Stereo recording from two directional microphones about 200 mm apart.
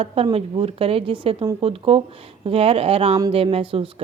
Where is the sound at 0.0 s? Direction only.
30° right (ahead or behind).